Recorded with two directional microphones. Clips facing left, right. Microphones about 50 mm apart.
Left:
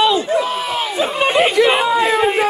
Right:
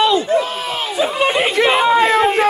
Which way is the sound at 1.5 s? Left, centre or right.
Right.